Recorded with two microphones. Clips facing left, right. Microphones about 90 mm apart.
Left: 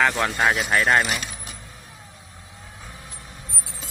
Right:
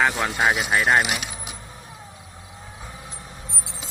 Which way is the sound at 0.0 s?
15° right (ahead or behind).